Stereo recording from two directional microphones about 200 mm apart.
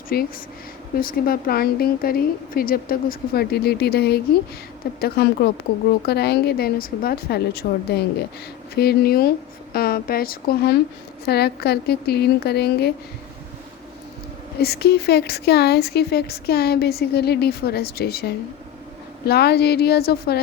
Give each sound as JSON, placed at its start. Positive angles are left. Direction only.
{"t": 0.1, "sound": "speech", "side_deg": 50}
{"t": 14.6, "sound": "speech", "side_deg": 55}